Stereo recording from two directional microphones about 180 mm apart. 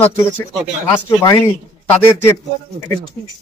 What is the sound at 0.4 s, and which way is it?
Speech, 15° left (ahead or behind).